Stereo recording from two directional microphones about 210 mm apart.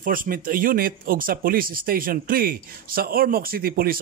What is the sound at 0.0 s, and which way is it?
Speech, 40° right (ahead or behind).